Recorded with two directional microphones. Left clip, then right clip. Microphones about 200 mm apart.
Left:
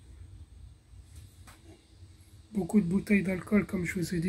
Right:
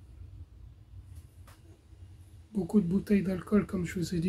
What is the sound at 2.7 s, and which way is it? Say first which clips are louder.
Speech: even; 10° right (ahead or behind).